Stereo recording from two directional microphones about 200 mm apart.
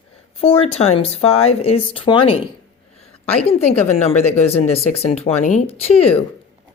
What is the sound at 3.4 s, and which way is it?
Speech, 30° left (ahead or behind).